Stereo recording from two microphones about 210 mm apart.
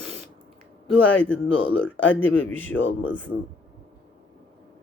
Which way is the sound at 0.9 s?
5° left (ahead or behind).